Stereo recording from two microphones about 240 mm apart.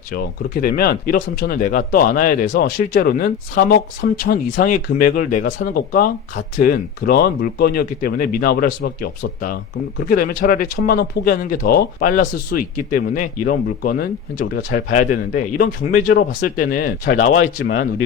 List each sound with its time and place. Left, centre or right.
0.1 s speech: left
17.2 s speech: left